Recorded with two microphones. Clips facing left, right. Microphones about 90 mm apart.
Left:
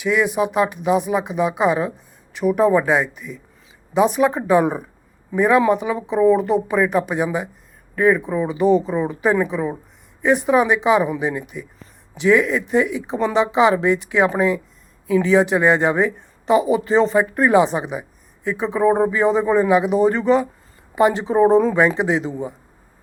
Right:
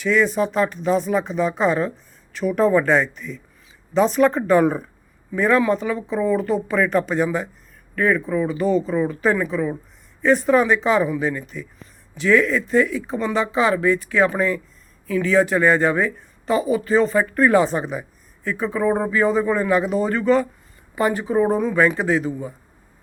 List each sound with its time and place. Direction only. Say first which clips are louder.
0.0 s speech: even; 15° left (ahead or behind); by 21.8 s 30° left (ahead or behind)
21.8 s speech: left 1 dB; 20° left (ahead or behind)